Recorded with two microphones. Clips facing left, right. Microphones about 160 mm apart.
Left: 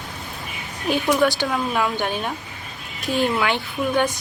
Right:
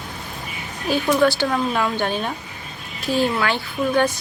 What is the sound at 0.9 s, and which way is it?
Speech, 20° left (ahead or behind).